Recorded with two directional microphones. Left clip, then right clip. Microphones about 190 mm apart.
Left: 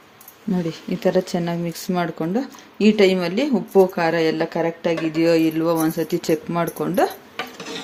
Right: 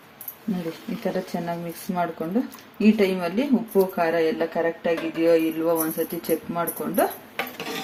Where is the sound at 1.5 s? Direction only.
50° left (ahead or behind).